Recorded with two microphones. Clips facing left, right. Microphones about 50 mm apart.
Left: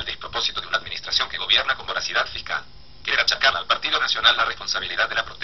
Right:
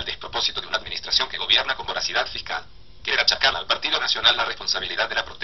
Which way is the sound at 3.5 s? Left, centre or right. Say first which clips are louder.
Left 2 dB; centre.